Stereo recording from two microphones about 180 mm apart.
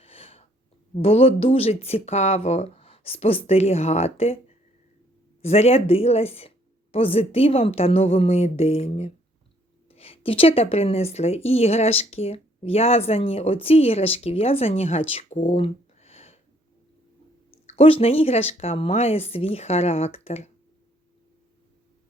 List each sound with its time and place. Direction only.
0.0 s a sound: 30° left (ahead or behind)
0.9 s a woman's voice: 35° left (ahead or behind)
5.4 s a woman's voice: 35° left (ahead or behind)
17.5 s a woman's voice: 30° left (ahead or behind)